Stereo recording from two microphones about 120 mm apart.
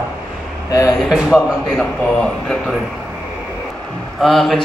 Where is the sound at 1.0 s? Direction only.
Centre (ahead or behind).